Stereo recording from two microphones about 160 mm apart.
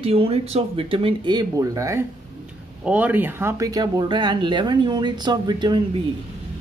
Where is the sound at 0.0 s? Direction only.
35° right (ahead or behind).